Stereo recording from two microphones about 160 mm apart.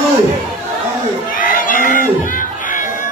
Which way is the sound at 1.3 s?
55° left (ahead or behind).